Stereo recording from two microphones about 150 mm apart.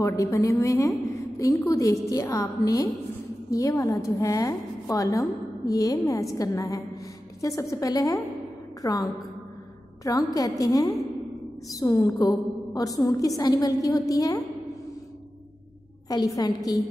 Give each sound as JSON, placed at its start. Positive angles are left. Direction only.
{"t": 0.0, "sound": "a woman's voice", "side_deg": 20}
{"t": 16.3, "sound": "a woman's voice", "side_deg": 25}